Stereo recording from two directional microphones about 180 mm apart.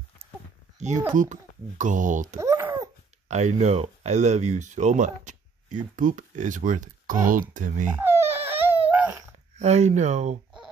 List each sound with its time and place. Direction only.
0.7 s speech: 40° right (ahead or behind)
2.4 s babbling: 15° right (ahead or behind)
3.3 s speech: 40° right (ahead or behind)
8.0 s a sound: 15° right (ahead or behind)
9.6 s speech: 40° right (ahead or behind)